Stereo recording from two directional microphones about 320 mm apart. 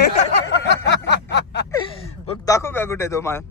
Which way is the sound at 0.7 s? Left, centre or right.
Left.